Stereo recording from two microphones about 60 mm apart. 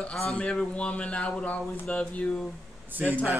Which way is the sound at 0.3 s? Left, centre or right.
Centre.